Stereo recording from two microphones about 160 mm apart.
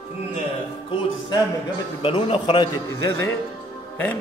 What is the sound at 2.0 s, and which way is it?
Speech, 35° left (ahead or behind).